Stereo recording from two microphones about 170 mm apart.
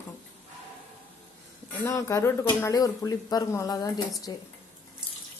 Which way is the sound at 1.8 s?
15° left (ahead or behind).